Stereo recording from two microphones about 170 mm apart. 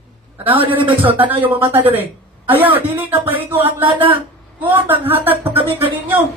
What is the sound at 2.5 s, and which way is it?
Music, 10° right (ahead or behind).